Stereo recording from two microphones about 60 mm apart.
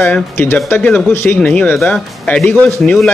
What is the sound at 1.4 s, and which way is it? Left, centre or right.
Speech, centre.